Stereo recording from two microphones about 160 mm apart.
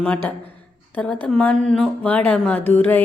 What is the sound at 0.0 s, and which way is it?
Speech, 10° left (ahead or behind).